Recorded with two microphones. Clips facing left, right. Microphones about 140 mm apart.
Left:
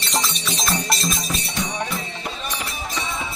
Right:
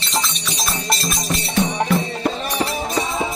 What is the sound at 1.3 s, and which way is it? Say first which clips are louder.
Music: right 6 dB; 75° right (ahead or behind).